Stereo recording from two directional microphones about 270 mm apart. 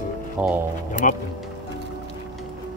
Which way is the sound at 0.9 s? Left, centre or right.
Left.